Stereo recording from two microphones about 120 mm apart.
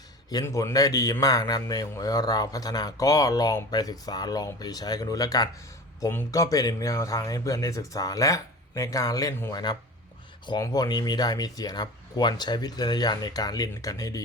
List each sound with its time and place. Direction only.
0.4 s speech: 25° left (ahead or behind)